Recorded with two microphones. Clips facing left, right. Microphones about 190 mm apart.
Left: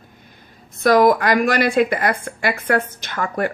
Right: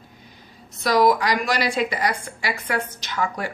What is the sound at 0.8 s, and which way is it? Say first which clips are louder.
Speech: left 4 dB; 55° left (ahead or behind).